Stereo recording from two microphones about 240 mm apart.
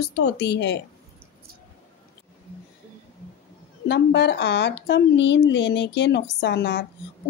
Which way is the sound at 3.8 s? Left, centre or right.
Left.